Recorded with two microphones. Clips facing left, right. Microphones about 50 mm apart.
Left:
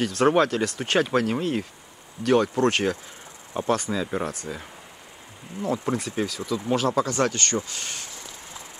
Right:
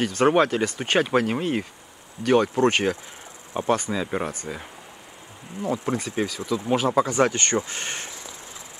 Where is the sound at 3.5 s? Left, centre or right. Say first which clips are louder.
Right 1 dB; centre.